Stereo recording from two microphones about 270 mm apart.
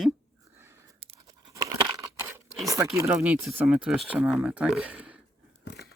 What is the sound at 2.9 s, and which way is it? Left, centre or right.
Speech, centre.